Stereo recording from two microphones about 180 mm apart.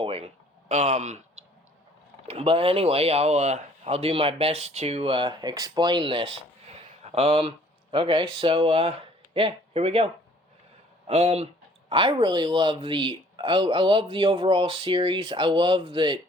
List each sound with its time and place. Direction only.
0.0 s a sound: 35° right (ahead or behind)
0.7 s speech: 40° right (ahead or behind)
2.2 s speech: 30° right (ahead or behind)
11.1 s speech: 35° right (ahead or behind)